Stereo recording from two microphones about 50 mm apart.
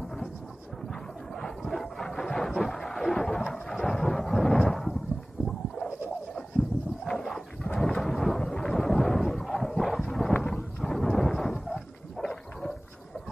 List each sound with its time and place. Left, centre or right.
1.7 s a sound: centre
3.6 s thunder: centre
7.1 s roaring cats: centre
7.6 s thunder: centre
7.9 s thunder: centre
8.5 s a sound: centre